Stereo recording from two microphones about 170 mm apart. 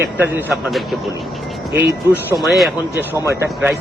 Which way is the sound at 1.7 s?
10° right (ahead or behind).